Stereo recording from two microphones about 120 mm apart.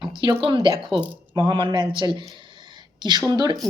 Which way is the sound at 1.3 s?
40° right (ahead or behind).